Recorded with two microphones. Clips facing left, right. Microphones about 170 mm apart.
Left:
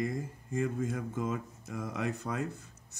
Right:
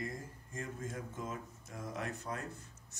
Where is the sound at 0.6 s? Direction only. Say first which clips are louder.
Left 10 dB; 90° left.